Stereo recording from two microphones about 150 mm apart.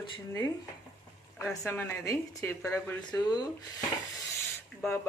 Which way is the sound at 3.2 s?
30° left (ahead or behind).